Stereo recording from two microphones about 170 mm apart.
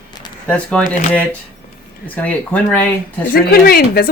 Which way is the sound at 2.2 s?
10° left (ahead or behind).